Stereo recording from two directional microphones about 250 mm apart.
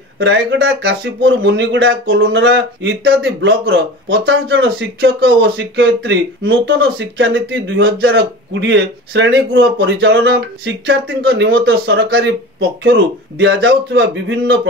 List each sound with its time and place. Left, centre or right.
0.2 s speech: right